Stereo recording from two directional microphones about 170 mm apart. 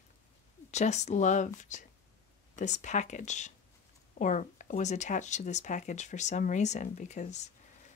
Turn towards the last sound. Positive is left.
turn(degrees=40)  # may be behind; listen again after turning